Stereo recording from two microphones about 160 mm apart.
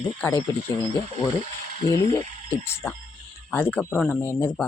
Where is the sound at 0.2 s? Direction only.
10° left (ahead or behind).